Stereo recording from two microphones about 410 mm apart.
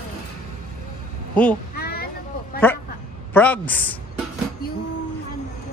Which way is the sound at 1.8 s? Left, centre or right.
Left.